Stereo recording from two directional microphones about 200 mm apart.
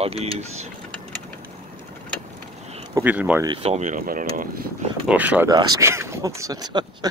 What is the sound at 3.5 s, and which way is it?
Speech, 35° right (ahead or behind).